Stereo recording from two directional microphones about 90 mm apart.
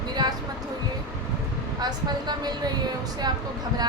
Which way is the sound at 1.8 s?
50° right (ahead or behind).